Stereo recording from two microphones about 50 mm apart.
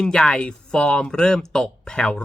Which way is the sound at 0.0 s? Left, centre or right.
Centre.